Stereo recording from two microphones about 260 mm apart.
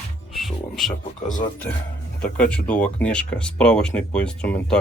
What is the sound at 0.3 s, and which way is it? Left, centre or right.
Music, centre.